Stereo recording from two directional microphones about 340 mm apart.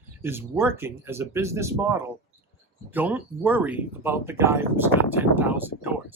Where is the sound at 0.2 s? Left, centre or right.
Centre.